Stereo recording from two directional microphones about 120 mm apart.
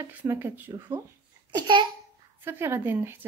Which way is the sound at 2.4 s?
20° right (ahead or behind).